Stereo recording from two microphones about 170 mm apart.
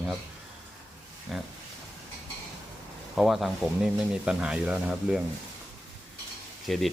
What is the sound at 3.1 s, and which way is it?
Speech, centre (ahead or behind).